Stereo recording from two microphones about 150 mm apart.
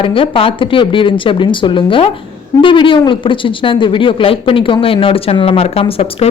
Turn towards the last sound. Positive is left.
turn(degrees=40)  # may be behind; listen again after turning